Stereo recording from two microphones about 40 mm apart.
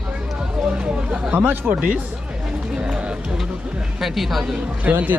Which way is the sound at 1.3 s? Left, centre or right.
Right.